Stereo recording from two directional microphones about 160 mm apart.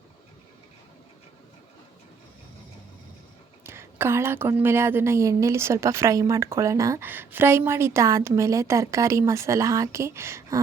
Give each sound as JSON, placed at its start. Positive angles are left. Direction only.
{"t": 3.6, "sound": "a woman's voice", "side_deg": -15}